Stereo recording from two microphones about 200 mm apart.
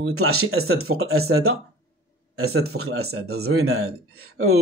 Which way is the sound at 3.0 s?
55° right (ahead or behind).